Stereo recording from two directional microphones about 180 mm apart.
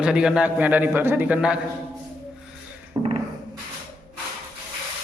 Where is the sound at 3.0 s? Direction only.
20° right (ahead or behind).